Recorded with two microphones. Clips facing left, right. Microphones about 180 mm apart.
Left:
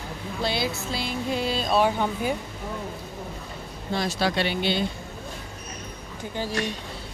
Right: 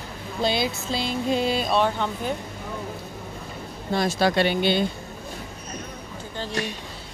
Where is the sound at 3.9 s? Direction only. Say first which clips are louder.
Right 4 dB; 50° right (ahead or behind).